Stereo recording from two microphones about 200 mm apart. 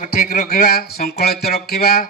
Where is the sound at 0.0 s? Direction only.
45° left (ahead or behind).